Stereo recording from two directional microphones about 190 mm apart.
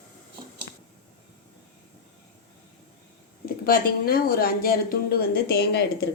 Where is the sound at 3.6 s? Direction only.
50° left (ahead or behind).